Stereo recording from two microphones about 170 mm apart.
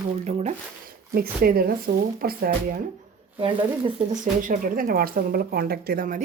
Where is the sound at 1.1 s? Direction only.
60° right (ahead or behind).